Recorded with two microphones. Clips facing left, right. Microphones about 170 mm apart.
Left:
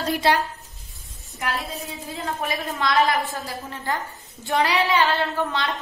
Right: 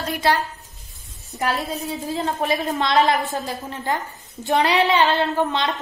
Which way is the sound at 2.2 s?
25° right (ahead or behind).